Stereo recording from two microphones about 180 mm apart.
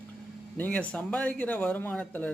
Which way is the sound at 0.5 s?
10° left (ahead or behind).